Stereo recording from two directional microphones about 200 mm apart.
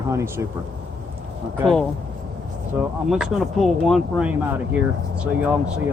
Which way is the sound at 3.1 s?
Centre (ahead or behind).